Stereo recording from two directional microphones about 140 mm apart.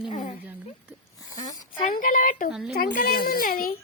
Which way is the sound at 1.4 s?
25° left (ahead or behind).